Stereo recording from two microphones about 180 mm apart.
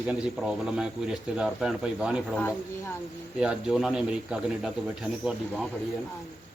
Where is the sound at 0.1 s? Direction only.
5° right (ahead or behind).